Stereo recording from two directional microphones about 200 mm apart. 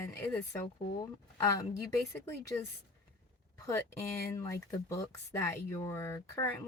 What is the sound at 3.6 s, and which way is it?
Speech, 15° left (ahead or behind).